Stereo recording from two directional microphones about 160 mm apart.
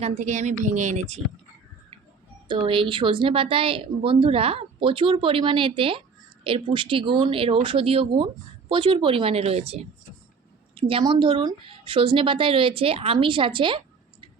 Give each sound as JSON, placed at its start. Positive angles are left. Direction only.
{"t": 0.0, "sound": "speech", "side_deg": -45}
{"t": 2.5, "sound": "speech", "side_deg": -30}